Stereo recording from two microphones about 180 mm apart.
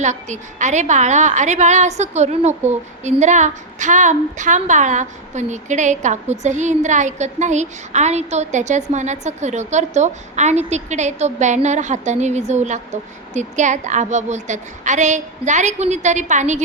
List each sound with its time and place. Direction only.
0.0 s a woman's voice: 40° right (ahead or behind)